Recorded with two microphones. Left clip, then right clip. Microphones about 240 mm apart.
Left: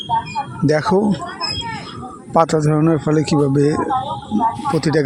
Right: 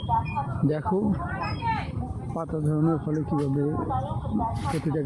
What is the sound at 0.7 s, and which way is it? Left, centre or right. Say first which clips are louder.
Speech: left 13 dB; left.